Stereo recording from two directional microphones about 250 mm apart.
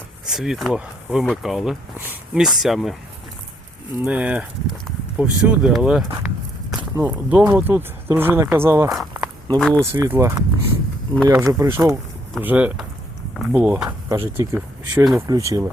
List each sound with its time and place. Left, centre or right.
0.3 s speech: centre
3.9 s speech: centre
9.8 s speech: centre